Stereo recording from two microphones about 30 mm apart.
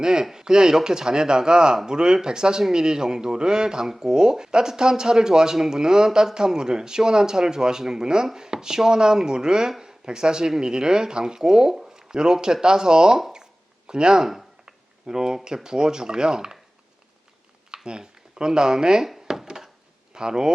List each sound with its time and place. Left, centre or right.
0.0 s speech: right
13.3 s a sound: right
14.2 s speech: centre
14.6 s typing: right
15.4 s speech: right
17.8 s speech: right
19.3 s a sound: centre
20.1 s speech: right